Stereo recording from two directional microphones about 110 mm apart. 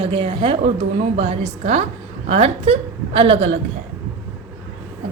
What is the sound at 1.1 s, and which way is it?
A woman's voice, 75° right (ahead or behind).